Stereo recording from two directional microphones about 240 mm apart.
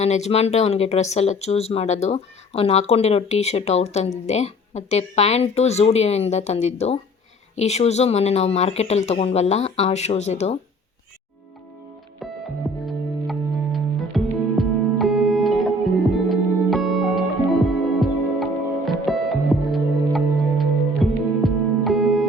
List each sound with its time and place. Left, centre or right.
0.0 s speech: left
12.2 s music: centre